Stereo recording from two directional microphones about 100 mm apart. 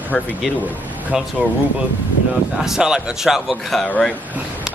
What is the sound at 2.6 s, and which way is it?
Speech, 5° right (ahead or behind).